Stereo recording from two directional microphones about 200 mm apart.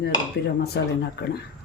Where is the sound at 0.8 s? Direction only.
55° left (ahead or behind).